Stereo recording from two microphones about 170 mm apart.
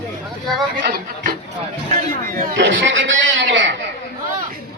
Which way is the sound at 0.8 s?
60° right (ahead or behind).